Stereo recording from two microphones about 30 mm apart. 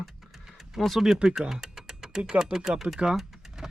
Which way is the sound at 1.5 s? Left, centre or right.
Centre.